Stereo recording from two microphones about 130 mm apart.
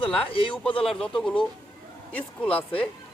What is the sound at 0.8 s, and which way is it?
Speech, 5° left (ahead or behind).